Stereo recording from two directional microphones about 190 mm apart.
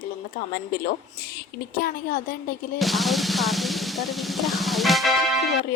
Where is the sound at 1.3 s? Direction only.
50° left (ahead or behind).